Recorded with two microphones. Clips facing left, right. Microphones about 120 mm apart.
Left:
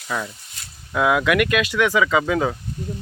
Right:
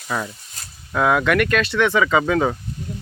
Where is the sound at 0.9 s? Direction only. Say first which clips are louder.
Right 1 dB; 5° left (ahead or behind).